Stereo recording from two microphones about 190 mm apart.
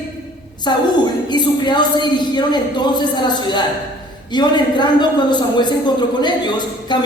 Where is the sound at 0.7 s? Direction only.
25° left (ahead or behind).